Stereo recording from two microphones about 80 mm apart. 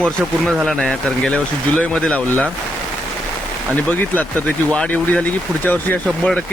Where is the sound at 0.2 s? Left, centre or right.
Centre.